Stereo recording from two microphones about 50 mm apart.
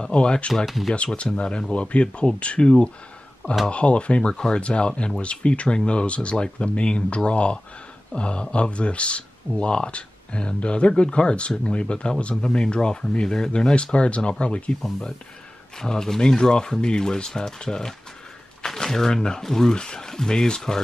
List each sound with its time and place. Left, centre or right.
0.0 s speech: centre
0.7 s speech: centre
0.9 s speech: left
14.8 s speech: centre